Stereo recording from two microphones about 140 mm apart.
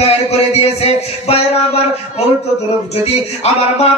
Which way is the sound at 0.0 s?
50° left (ahead or behind).